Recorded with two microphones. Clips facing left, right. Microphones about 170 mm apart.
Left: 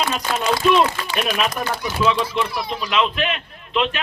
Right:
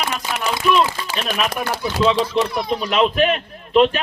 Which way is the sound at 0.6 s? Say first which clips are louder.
Even; 20° left (ahead or behind).